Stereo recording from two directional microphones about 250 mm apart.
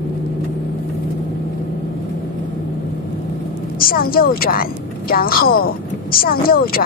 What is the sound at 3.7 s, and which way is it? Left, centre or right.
A woman's voice, left.